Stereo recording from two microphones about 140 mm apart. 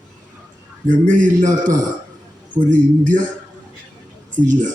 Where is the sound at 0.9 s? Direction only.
70° right (ahead or behind).